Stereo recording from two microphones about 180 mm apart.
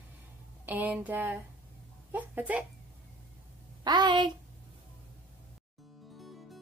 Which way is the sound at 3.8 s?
25° right (ahead or behind).